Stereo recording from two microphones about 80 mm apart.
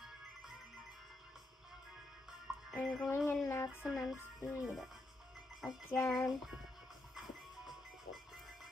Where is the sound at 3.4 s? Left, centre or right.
Left.